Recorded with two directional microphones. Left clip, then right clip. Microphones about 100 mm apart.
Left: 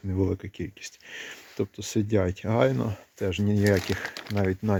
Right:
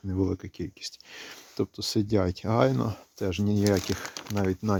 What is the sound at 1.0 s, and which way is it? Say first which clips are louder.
Speech: left 4 dB; 55° right (ahead or behind).